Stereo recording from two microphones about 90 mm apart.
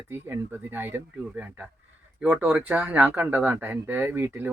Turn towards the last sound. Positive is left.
turn(degrees=-20)  # may be behind; listen again after turning